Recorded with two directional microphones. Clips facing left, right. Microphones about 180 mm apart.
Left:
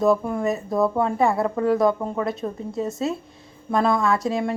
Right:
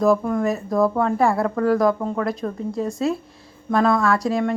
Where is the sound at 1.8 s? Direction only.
5° left (ahead or behind).